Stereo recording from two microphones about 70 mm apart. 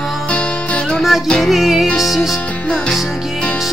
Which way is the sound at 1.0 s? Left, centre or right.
Centre.